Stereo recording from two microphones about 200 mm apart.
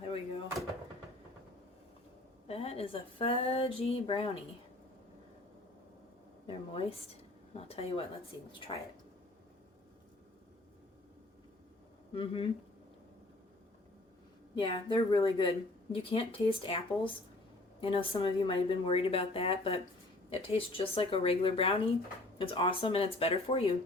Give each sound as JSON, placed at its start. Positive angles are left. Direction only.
{"t": 0.0, "sound": "door", "side_deg": 30}
{"t": 2.5, "sound": "speech", "side_deg": 30}
{"t": 6.5, "sound": "a sound", "side_deg": 30}
{"t": 7.5, "sound": "speech", "side_deg": 30}
{"t": 12.1, "sound": "speech", "side_deg": 30}
{"t": 14.5, "sound": "speech", "side_deg": 25}